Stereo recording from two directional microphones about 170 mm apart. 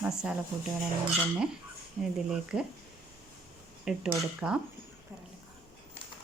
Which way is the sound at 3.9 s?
5° right (ahead or behind).